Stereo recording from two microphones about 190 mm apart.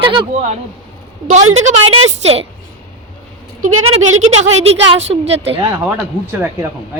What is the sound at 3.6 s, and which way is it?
Speech, 90° right.